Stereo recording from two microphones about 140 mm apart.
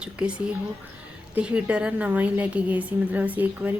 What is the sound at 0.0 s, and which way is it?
A woman's voice, 5° right (ahead or behind).